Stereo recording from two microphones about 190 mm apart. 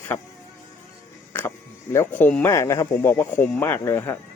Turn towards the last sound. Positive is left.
turn(degrees=15)  # may be behind; listen again after turning